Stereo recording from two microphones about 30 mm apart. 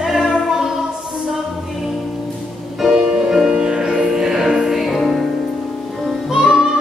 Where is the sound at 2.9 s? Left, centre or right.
Centre.